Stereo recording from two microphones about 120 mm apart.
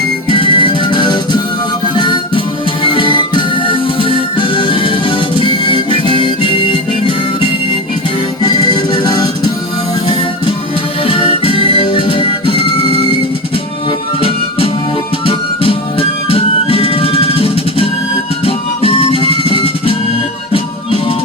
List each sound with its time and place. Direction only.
0.3 s music: 45° left (ahead or behind)
8.4 s music: 35° left (ahead or behind)
11.0 s music: 50° left (ahead or behind)
14.2 s music: 50° left (ahead or behind)